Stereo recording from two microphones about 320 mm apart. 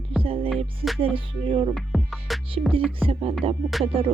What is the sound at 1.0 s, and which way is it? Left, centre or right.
Speech, centre.